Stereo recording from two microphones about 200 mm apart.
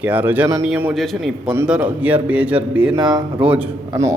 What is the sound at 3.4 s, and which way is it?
Speech, 5° right (ahead or behind).